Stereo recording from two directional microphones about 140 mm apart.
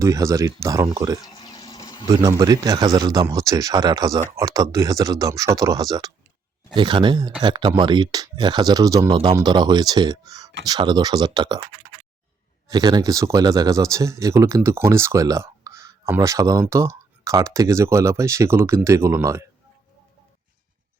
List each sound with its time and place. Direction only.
0.0 s speech: 20° right (ahead or behind)
1.2 s a sound: 30° left (ahead or behind)
2.0 s speech: 25° right (ahead or behind)
12.7 s speech: 30° right (ahead or behind)